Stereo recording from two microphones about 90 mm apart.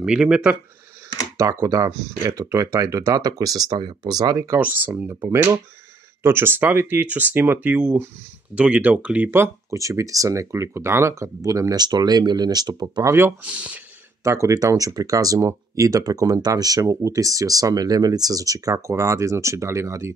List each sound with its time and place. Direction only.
0.0 s speech: 10° right (ahead or behind)
1.4 s speech: 40° right (ahead or behind)
4.5 s speech: 20° right (ahead or behind); by 13.1 s 45° right (ahead or behind)
13.1 s speech: 25° right (ahead or behind)
13.5 s speech: 15° right (ahead or behind)
14.2 s speech: 35° right (ahead or behind)